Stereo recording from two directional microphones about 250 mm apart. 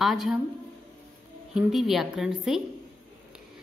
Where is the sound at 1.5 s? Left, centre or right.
Centre.